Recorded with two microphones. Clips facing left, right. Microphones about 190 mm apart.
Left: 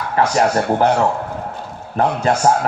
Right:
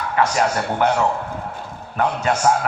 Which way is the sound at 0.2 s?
35° left (ahead or behind).